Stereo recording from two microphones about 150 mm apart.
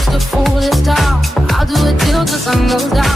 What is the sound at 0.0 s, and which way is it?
Music, centre (ahead or behind).